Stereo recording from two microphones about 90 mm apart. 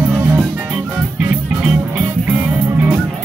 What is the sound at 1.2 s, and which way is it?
Music, 20° right (ahead or behind).